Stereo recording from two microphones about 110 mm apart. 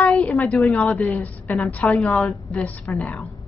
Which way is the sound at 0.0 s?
10° left (ahead or behind).